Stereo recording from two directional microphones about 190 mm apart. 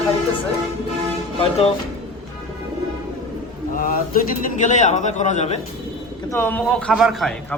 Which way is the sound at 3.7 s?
45° left (ahead or behind).